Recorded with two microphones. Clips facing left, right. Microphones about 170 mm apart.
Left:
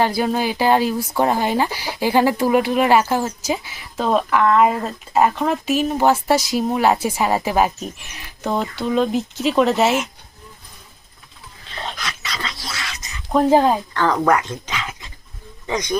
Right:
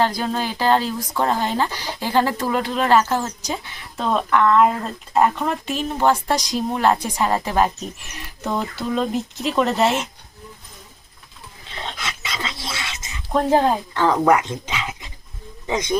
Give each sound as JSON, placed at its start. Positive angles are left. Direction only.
{"t": 0.0, "sound": "speech", "side_deg": 10}
{"t": 11.9, "sound": "dog", "side_deg": -25}
{"t": 13.3, "sound": "speech", "side_deg": 5}
{"t": 13.9, "sound": "speech", "side_deg": -15}